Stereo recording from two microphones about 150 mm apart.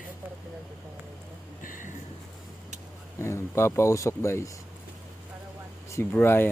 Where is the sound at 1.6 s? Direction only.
65° left (ahead or behind).